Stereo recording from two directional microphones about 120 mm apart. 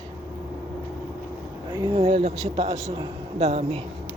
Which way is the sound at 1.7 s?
35° right (ahead or behind).